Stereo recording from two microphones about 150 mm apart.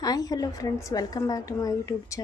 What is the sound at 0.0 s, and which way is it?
A woman's voice, 25° left (ahead or behind).